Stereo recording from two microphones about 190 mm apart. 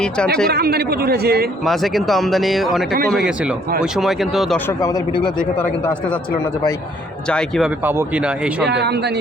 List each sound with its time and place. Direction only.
0.5 s speech: 55° right (ahead or behind)
1.6 s speech: centre (ahead or behind)
4.8 s speech: 25° left (ahead or behind)
7.3 s speech: 5° left (ahead or behind)
7.9 s speech: 10° right (ahead or behind)
8.6 s speech: 65° right (ahead or behind)